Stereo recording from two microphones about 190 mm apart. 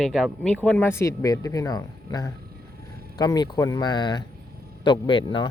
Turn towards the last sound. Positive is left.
turn(degrees=25)  # may be behind; listen again after turning